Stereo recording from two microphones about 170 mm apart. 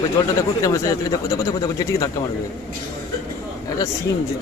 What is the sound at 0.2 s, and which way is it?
A man's voice, 15° left (ahead or behind).